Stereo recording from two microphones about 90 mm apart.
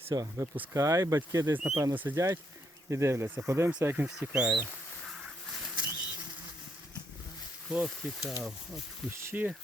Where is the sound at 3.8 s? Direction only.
20° right (ahead or behind).